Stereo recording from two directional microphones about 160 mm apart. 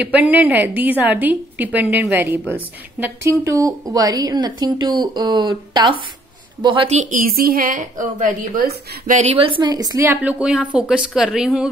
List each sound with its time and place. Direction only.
0.0 s a woman's voice: 10° right (ahead or behind); by 7.0 s 35° right (ahead or behind)
7.0 s a woman's voice: 55° right (ahead or behind)
9.2 s a woman's voice: 40° right (ahead or behind); by 11.7 s 5° right (ahead or behind)